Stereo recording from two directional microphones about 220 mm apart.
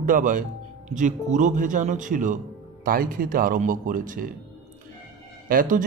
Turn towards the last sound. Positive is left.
turn(degrees=-40)  # may be behind; listen again after turning